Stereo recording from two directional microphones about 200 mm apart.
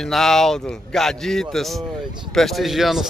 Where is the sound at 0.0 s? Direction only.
Centre (ahead or behind).